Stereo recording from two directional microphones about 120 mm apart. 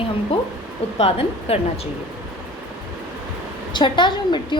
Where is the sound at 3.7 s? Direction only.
40° left (ahead or behind).